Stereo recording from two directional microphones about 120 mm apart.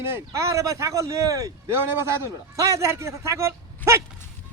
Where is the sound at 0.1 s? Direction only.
25° right (ahead or behind).